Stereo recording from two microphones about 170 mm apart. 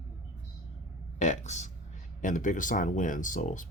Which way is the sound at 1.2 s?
45° left (ahead or behind).